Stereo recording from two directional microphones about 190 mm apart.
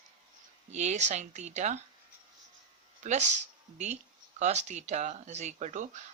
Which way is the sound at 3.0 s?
40° right (ahead or behind).